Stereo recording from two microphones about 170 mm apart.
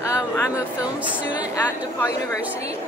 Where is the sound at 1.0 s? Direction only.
10° right (ahead or behind).